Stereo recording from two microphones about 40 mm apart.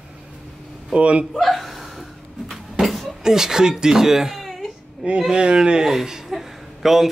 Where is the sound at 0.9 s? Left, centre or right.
Right.